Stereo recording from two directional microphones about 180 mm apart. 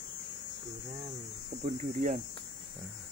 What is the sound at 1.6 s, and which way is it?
Speech, 45° right (ahead or behind).